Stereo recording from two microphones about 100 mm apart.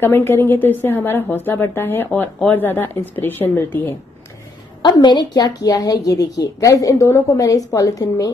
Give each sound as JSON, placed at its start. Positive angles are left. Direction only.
{"t": 0.0, "sound": "a woman's voice", "side_deg": 25}
{"t": 4.8, "sound": "a woman's voice", "side_deg": 50}